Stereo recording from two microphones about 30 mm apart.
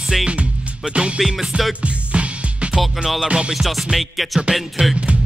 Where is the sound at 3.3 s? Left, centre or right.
Right.